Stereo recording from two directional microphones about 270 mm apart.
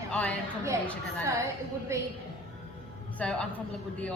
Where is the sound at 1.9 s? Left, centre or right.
Centre.